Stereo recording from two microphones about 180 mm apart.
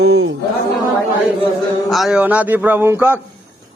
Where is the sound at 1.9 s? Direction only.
5° right (ahead or behind).